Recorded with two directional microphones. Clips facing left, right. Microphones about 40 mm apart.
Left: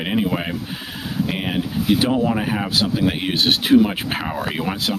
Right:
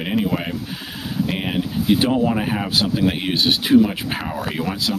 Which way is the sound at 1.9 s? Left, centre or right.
Centre.